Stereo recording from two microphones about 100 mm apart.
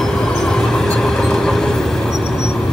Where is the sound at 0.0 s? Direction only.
5° left (ahead or behind).